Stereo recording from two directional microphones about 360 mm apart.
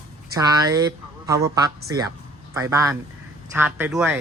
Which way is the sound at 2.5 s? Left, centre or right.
Centre.